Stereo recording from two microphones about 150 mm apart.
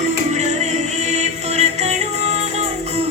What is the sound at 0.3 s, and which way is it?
Music, 50° right (ahead or behind).